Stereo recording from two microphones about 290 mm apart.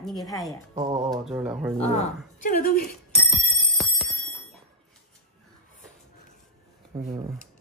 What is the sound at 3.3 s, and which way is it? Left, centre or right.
Music, centre.